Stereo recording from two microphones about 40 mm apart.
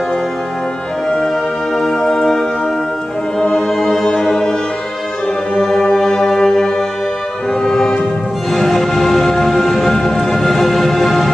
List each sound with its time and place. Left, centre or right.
1.0 s music: centre
5.7 s music: centre